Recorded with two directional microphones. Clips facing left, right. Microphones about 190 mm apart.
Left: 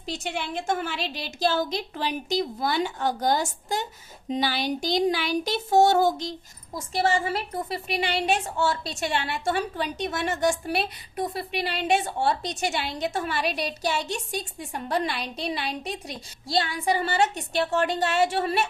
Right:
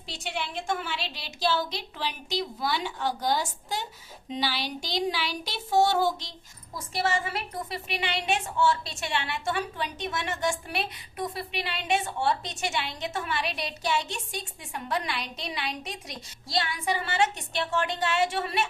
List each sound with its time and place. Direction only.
0.0 s a woman's voice: 45° left (ahead or behind)
6.7 s a woman's voice: 35° left (ahead or behind)